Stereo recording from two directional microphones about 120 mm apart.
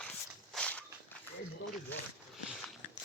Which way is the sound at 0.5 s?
10° left (ahead or behind).